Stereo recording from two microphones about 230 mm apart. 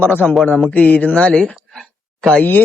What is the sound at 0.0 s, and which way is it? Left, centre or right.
A man's voice, centre.